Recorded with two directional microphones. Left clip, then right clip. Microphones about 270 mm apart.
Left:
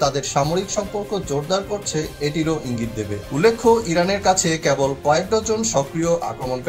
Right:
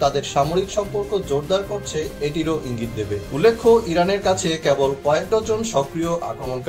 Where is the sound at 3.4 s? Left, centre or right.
Left.